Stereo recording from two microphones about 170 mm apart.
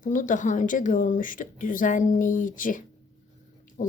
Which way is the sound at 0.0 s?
50° left (ahead or behind).